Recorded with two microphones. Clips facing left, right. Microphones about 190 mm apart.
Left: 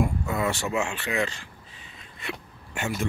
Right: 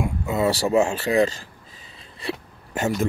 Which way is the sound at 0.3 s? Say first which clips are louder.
Right 7 dB; 30° right (ahead or behind).